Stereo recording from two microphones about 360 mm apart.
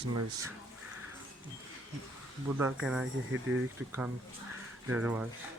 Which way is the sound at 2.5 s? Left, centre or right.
Centre.